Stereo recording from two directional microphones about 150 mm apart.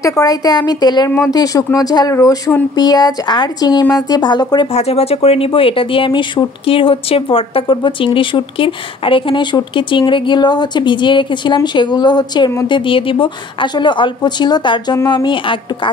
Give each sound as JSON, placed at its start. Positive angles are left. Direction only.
{"t": 0.0, "sound": "speech", "side_deg": 25}
{"t": 4.7, "sound": "speech", "side_deg": 45}